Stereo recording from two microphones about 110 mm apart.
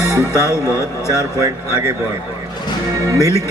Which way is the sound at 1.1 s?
30° right (ahead or behind).